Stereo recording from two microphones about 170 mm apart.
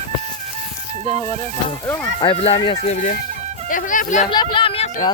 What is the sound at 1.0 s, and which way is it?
Speech, 40° right (ahead or behind).